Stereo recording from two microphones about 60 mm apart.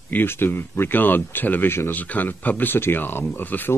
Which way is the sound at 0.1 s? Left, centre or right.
Left.